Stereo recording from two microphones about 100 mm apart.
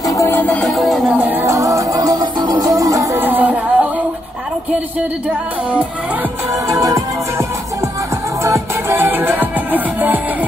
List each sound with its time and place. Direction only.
0.0 s music: 35° left (ahead or behind)
0.6 s music: centre (ahead or behind)
1.2 s music: 20° right (ahead or behind)
1.5 s music: 35° right (ahead or behind)
3.2 s music: 20° right (ahead or behind)
6.7 s music: 35° right (ahead or behind)
8.5 s music: 30° right (ahead or behind)